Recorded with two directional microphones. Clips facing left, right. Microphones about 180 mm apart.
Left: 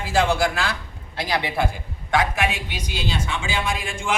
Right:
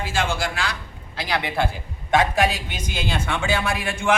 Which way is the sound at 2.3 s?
35° right (ahead or behind).